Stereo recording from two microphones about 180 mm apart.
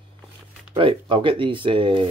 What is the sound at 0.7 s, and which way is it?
Speech, 30° right (ahead or behind).